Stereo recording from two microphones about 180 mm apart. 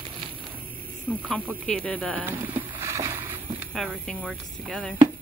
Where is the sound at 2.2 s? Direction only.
10° right (ahead or behind).